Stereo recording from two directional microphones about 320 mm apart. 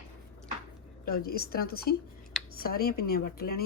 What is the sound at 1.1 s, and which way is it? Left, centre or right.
Speech, left.